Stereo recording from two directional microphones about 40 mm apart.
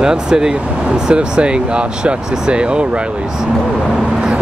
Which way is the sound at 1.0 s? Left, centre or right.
Right.